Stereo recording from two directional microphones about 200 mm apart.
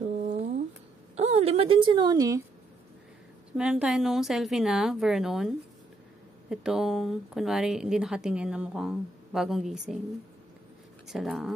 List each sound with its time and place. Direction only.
0.0 s a sound: 35° right (ahead or behind)
1.1 s a woman's voice: 30° right (ahead or behind); by 2.4 s 15° right (ahead or behind)
3.5 s speech: 5° right (ahead or behind)
6.5 s speech: centre (ahead or behind)
11.1 s speech: centre (ahead or behind)